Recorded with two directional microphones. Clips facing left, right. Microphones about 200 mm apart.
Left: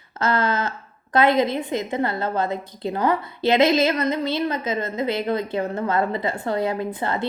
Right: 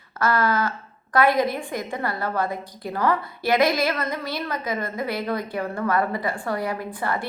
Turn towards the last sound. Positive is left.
turn(degrees=20)  # may be behind; listen again after turning